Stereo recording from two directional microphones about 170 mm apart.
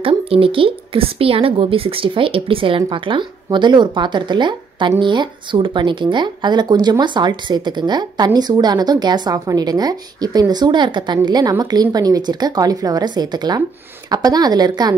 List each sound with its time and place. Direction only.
0.0 s speech: 35° right (ahead or behind)